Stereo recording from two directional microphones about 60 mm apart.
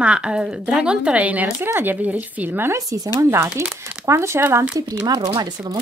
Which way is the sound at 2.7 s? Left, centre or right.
Right.